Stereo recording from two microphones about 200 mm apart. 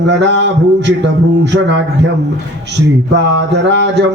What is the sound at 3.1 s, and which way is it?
Speech, 60° right (ahead or behind).